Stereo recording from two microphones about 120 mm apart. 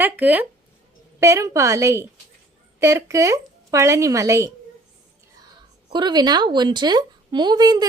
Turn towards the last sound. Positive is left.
turn(degrees=-35)  # may be behind; listen again after turning